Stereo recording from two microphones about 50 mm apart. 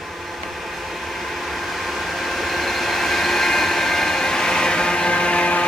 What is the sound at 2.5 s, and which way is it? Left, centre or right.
Vehicle, centre.